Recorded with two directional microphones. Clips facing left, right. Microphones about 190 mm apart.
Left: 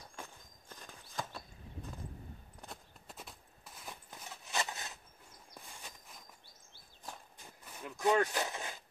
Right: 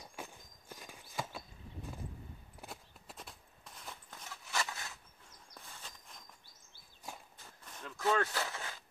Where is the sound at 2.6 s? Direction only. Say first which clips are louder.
Right 1 dB; centre (ahead or behind).